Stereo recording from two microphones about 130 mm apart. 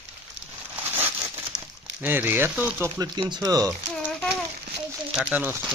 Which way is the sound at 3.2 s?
30° right (ahead or behind).